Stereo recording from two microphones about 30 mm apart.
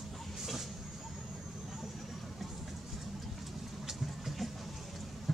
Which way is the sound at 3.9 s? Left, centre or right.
Centre.